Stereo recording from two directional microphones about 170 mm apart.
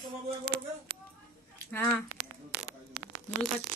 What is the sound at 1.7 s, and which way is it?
Speech, 10° left (ahead or behind).